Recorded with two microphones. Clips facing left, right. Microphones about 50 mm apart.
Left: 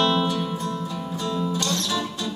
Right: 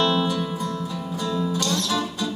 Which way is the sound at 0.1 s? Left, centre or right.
Left.